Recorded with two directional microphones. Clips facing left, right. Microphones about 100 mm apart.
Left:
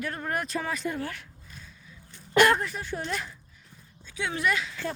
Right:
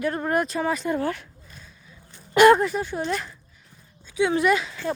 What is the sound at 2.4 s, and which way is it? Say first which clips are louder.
Speech: right 10 dB; 15° right (ahead or behind).